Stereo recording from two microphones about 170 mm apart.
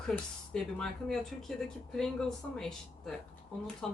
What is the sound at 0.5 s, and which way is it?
Speech, 5° left (ahead or behind).